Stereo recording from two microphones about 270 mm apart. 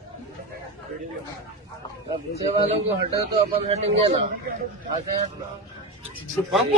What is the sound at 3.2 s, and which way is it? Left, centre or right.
Speech, right.